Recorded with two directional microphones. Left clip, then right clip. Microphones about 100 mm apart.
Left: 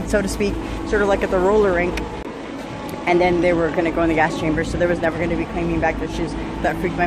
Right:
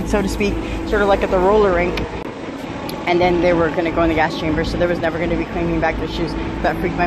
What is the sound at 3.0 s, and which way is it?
Speech, 40° left (ahead or behind).